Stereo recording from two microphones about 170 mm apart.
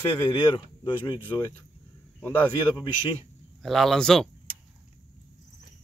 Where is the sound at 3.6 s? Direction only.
Centre (ahead or behind).